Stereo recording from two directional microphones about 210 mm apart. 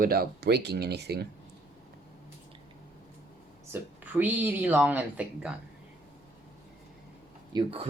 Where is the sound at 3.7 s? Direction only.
10° right (ahead or behind).